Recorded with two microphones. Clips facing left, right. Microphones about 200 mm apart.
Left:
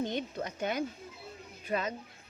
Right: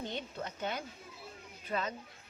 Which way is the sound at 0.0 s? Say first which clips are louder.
Left 6 dB; 15° left (ahead or behind).